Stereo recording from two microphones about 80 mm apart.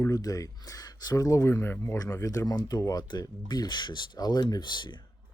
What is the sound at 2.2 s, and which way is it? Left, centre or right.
Speech, left.